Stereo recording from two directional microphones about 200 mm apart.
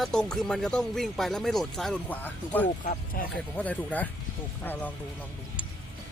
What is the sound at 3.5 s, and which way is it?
Speech, 5° left (ahead or behind).